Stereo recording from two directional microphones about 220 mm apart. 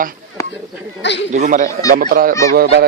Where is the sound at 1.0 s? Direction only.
55° left (ahead or behind).